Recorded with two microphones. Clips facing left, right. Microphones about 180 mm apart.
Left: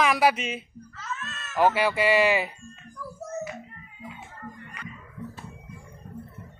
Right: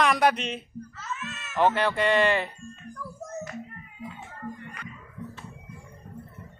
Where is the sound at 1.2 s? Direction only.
15° right (ahead or behind).